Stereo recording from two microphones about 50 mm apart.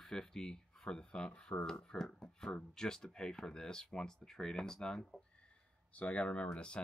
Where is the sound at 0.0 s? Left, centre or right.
Centre.